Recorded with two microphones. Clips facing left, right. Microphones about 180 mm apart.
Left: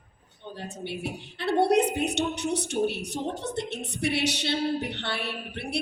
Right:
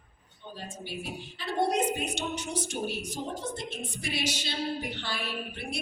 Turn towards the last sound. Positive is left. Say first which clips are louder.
# left 3 dB
turn(degrees=65)  # may be behind; listen again after turning